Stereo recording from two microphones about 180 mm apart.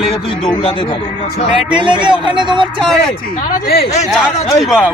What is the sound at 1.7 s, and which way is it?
Speech, 25° right (ahead or behind).